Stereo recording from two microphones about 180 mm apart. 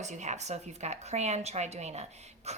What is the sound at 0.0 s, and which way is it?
Speech, 40° right (ahead or behind).